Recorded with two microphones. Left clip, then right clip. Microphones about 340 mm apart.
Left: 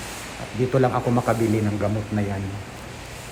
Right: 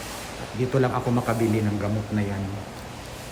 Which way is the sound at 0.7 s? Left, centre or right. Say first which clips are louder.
Left 3 dB; centre.